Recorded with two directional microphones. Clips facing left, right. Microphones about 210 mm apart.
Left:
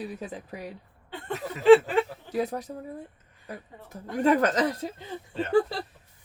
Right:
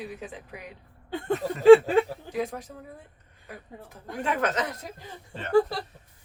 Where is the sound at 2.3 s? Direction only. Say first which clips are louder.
Left 3 dB; 40° left (ahead or behind).